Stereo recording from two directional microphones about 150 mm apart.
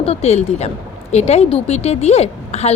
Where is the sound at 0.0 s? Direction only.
45° left (ahead or behind).